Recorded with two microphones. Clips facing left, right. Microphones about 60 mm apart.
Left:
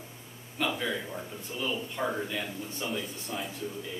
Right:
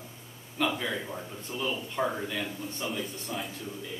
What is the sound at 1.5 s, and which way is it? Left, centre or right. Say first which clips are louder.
Speech: right 2 dB; centre.